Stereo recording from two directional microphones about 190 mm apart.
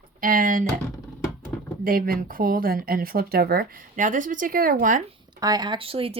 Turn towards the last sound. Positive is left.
turn(degrees=-30)  # may be behind; listen again after turning